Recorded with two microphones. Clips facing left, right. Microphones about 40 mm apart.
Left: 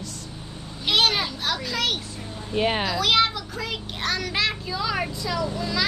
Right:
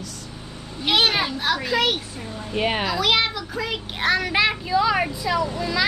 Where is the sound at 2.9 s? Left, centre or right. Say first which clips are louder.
Even; centre.